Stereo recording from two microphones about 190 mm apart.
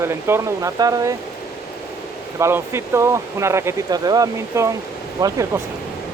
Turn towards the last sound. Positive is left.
turn(degrees=-15)  # may be behind; listen again after turning